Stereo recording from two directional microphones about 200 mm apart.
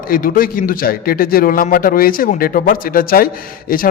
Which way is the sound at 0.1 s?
45° left (ahead or behind).